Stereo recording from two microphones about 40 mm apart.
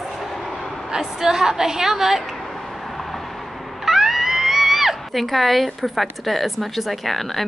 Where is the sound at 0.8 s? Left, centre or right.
Centre.